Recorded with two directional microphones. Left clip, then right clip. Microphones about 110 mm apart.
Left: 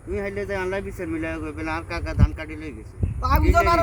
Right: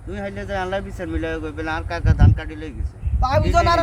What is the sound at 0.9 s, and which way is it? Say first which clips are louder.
Speech: right 2 dB; 5° right (ahead or behind).